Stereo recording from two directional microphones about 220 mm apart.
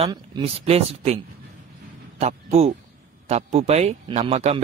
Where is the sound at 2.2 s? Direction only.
30° right (ahead or behind).